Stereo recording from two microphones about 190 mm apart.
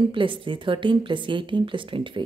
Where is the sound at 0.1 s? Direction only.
25° right (ahead or behind).